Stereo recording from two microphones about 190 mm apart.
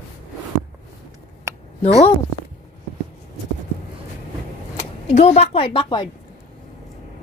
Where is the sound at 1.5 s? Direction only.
15° right (ahead or behind).